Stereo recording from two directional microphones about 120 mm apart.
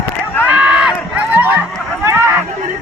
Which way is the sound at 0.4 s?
10° right (ahead or behind).